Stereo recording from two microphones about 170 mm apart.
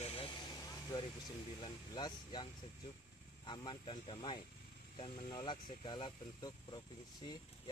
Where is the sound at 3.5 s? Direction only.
25° left (ahead or behind).